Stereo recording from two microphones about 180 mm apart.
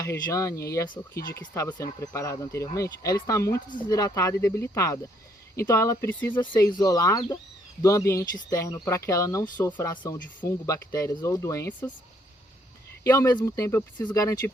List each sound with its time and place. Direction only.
0.0 s speech: 20° left (ahead or behind)
6.5 s speech: 20° left (ahead or behind)
9.9 s speech: 25° left (ahead or behind)
13.1 s speech: 20° left (ahead or behind)